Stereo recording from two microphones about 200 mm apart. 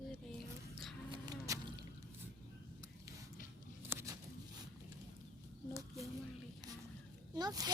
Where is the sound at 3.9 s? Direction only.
15° right (ahead or behind).